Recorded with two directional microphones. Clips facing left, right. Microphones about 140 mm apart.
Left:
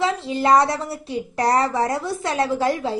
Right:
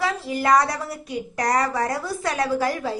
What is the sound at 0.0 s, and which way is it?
A woman's voice, 25° left (ahead or behind).